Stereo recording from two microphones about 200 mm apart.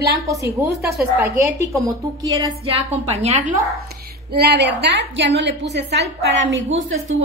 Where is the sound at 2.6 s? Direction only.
30° right (ahead or behind).